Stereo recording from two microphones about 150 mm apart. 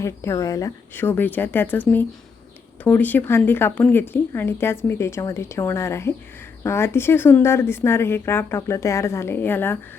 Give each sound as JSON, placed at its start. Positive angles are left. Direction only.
{"t": 0.0, "sound": "speech", "side_deg": 20}
{"t": 2.8, "sound": "speech", "side_deg": 10}